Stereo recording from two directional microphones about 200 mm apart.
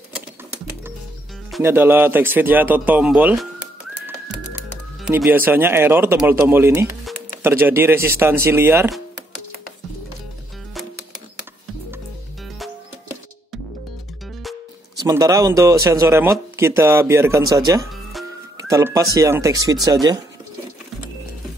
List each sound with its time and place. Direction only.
1.6 s speech: 10° right (ahead or behind)
5.0 s speech: 10° right (ahead or behind)
15.0 s speech: 20° right (ahead or behind)